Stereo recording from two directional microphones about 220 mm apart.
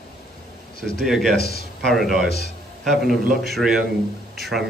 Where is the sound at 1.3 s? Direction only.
45° left (ahead or behind).